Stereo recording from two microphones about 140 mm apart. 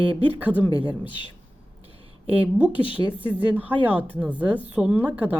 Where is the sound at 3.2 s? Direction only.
10° right (ahead or behind).